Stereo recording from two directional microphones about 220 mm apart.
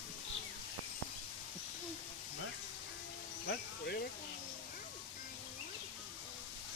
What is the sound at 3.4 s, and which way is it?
Music, 45° left (ahead or behind).